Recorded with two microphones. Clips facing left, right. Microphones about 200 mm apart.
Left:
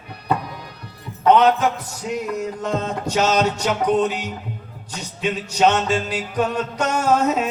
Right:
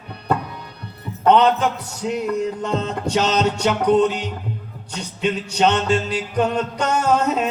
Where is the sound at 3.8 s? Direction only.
10° left (ahead or behind).